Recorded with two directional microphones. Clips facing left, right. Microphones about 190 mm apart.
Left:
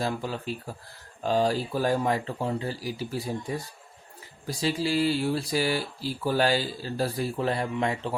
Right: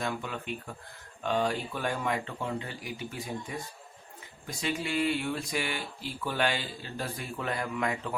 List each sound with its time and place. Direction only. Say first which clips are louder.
0.0 s speech: left 4 dB; 35° left (ahead or behind)